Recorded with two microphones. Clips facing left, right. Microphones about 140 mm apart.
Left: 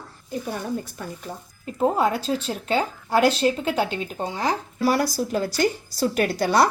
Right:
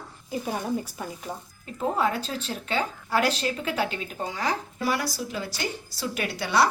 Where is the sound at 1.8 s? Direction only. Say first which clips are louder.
Left 4 dB; 35° left (ahead or behind).